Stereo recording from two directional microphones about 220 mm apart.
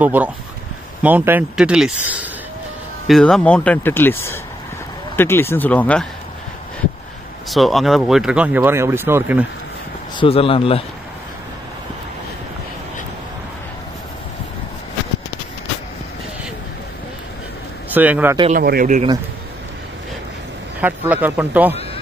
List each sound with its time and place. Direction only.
0.0 s speech: 5° right (ahead or behind)
7.4 s speech: centre (ahead or behind)
10.1 s speech: 25° left (ahead or behind)
17.9 s speech: 10° right (ahead or behind)
18.5 s speech: 45° right (ahead or behind)
20.8 s speech: 5° right (ahead or behind)